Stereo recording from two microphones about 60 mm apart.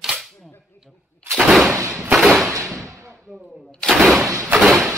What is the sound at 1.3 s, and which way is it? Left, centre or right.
Gunshot, centre.